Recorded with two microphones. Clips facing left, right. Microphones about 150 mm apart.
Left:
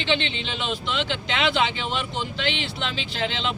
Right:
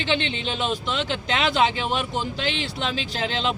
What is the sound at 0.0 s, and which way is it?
Speech, 45° right (ahead or behind).